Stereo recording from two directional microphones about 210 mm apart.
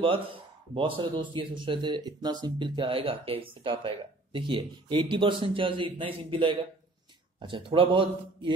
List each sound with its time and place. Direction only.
0.7 s speech: 25° right (ahead or behind)